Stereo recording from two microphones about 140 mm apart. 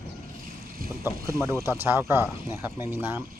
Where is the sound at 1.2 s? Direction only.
20° right (ahead or behind).